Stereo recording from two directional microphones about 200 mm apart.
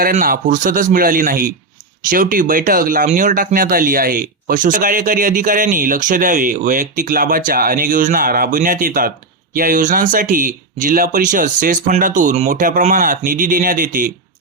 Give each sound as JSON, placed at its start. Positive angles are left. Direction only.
{"t": 0.0, "sound": "speech", "side_deg": -45}